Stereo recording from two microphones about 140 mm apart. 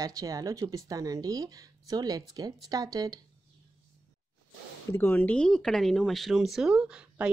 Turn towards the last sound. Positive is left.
turn(degrees=-10)  # may be behind; listen again after turning